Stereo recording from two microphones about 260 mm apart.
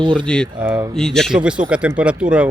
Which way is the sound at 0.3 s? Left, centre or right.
Centre.